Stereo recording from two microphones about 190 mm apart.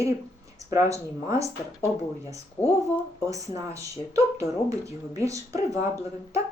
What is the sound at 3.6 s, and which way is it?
Speech, 15° right (ahead or behind).